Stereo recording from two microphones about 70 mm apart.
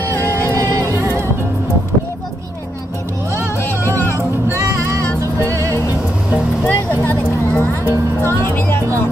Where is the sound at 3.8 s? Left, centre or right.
Left.